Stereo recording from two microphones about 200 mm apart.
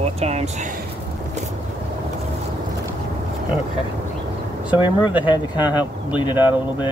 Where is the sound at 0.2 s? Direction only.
35° right (ahead or behind).